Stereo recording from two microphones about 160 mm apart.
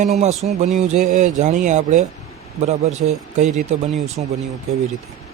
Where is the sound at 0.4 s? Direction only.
45° right (ahead or behind).